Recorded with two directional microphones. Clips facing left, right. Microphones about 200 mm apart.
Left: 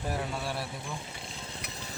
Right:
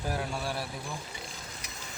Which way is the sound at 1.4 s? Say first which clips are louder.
Left 3 dB; 30° left (ahead or behind).